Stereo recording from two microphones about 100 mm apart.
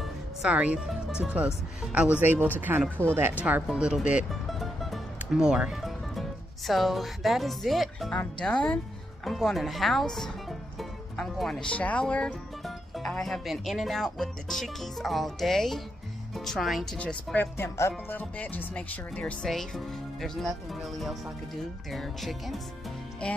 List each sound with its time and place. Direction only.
0.0 s music: 10° right (ahead or behind)
0.8 s speech: 5° right (ahead or behind)
4.3 s music: centre (ahead or behind)
6.7 s speech: centre (ahead or behind)
10.8 s music: centre (ahead or behind)
11.7 s music: 15° left (ahead or behind)
13.1 s speech: 5° left (ahead or behind)
17.6 s speech: 25° left (ahead or behind)
18.1 s speech: 15° left (ahead or behind)